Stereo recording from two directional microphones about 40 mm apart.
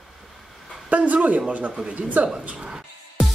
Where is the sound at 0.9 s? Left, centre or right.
Right.